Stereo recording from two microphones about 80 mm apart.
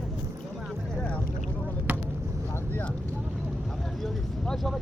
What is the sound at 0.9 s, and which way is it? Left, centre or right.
Boat, centre.